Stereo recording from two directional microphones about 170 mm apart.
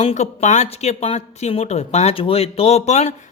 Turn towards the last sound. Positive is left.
turn(degrees=40)  # may be behind; listen again after turning